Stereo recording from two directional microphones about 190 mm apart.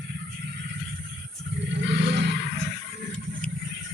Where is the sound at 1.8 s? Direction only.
65° right (ahead or behind).